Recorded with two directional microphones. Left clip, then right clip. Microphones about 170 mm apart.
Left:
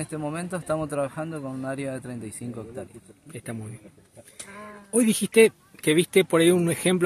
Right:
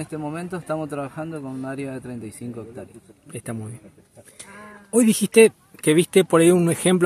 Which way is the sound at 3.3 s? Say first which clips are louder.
Right 4 dB; 25° right (ahead or behind).